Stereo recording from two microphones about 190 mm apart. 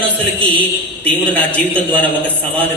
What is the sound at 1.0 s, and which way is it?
A man's voice, 5° left (ahead or behind).